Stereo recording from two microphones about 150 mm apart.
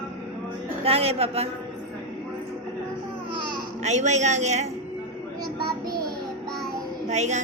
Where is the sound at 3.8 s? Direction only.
50° right (ahead or behind).